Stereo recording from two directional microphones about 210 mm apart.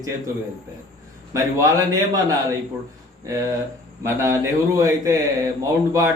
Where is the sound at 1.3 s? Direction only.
15° right (ahead or behind).